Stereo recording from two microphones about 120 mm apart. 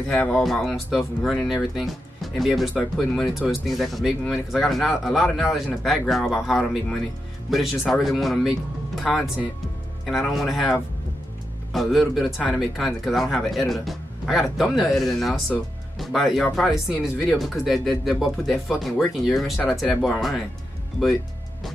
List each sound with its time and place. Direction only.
0.2 s speech: 5° left (ahead or behind)